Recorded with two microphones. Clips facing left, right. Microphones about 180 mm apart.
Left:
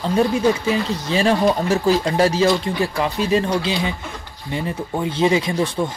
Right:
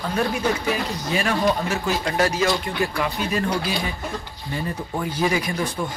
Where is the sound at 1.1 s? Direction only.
30° left (ahead or behind).